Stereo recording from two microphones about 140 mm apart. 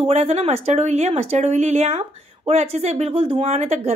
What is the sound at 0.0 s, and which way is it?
Speech, 50° right (ahead or behind).